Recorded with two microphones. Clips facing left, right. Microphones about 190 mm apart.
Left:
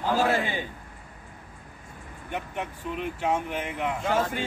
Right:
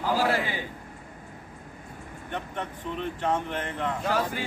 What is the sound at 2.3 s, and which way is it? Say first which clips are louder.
Speech: left 1 dB; 10° left (ahead or behind).